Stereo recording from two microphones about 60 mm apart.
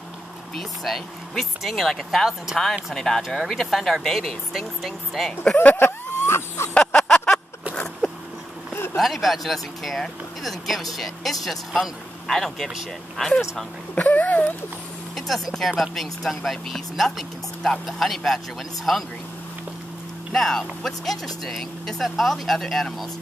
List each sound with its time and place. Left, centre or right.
0.6 s speech: centre
5.6 s a sound: left
6.7 s a sound: centre
8.9 s speech: centre
13.9 s speech: left
15.1 s speech: centre
20.3 s speech: centre